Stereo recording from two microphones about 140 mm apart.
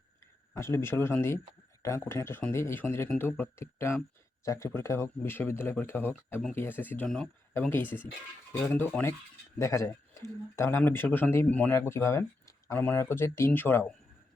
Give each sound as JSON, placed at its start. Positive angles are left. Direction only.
{"t": 0.5, "sound": "speech", "side_deg": 20}